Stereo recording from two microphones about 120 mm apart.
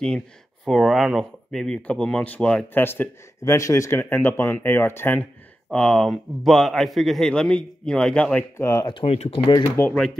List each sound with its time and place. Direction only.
0.7 s speech: centre (ahead or behind); by 5.3 s 15° left (ahead or behind)
5.7 s a man's voice: 5° left (ahead or behind)
8.5 s speech: 25° left (ahead or behind)
8.8 s speech: 50° left (ahead or behind)
9.8 s speech: 20° left (ahead or behind)